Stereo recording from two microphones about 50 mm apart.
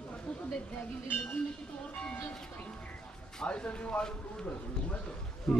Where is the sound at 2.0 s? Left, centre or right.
Left.